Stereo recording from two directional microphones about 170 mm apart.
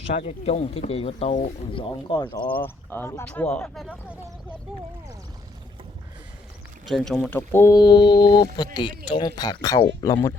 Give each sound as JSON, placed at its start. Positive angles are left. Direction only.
{"t": 0.1, "sound": "speech", "side_deg": 40}
{"t": 2.5, "sound": "speech", "side_deg": 10}
{"t": 6.8, "sound": "speech", "side_deg": 0}
{"t": 7.3, "sound": "speech", "side_deg": 10}